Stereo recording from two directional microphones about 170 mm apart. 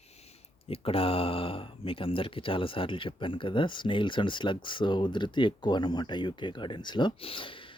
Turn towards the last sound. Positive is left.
turn(degrees=30)  # may be behind; listen again after turning